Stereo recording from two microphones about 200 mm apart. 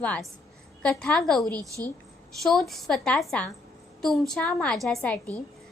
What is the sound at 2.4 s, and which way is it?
A woman's voice, centre (ahead or behind).